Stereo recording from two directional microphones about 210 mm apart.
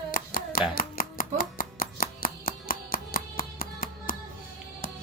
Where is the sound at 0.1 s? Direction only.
45° left (ahead or behind).